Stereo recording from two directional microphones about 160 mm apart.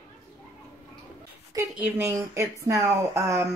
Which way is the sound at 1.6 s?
10° right (ahead or behind).